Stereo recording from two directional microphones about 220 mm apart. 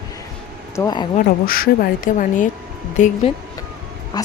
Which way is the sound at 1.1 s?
40° left (ahead or behind).